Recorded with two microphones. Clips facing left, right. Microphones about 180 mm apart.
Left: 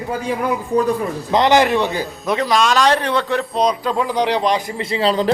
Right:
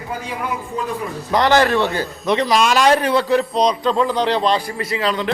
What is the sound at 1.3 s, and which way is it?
Speech, 20° left (ahead or behind).